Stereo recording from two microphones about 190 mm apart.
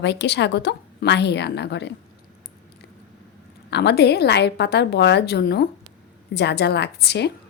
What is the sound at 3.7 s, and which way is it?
Speech, 60° left (ahead or behind).